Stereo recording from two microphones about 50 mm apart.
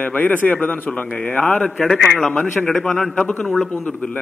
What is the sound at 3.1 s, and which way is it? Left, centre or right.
Speech, left.